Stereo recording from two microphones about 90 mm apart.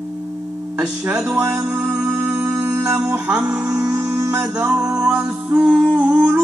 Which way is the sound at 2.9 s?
10° right (ahead or behind).